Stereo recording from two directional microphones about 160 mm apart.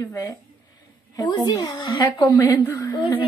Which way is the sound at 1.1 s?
25° left (ahead or behind).